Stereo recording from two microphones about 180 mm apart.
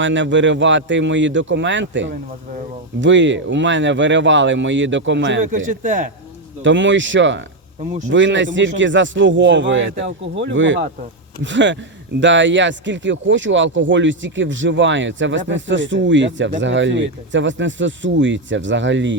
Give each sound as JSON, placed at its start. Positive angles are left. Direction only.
{"t": 0.0, "sound": "speech", "side_deg": -90}
{"t": 5.6, "sound": "speech", "side_deg": -45}
{"t": 6.6, "sound": "speech", "side_deg": -90}